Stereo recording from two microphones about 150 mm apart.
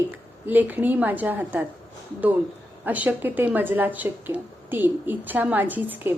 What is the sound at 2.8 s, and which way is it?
Speech, 10° right (ahead or behind).